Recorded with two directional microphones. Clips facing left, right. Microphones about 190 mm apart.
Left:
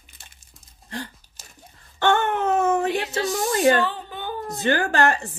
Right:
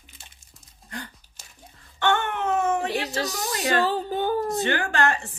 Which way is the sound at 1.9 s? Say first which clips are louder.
Left 4 dB; 35° left (ahead or behind).